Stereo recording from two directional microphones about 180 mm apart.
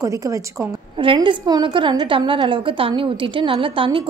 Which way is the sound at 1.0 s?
25° right (ahead or behind).